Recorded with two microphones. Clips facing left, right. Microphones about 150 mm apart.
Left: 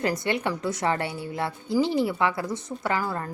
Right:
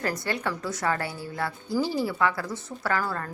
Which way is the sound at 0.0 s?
20° left (ahead or behind).